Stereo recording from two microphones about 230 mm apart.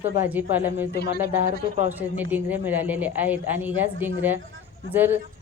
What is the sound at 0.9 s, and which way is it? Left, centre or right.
Speech, left.